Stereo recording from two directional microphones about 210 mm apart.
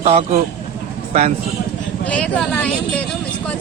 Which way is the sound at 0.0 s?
30° right (ahead or behind).